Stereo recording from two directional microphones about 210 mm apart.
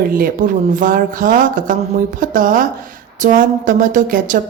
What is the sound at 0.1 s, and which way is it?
Speech, 40° right (ahead or behind).